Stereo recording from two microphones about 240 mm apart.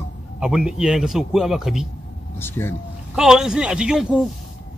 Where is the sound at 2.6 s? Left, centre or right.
Centre.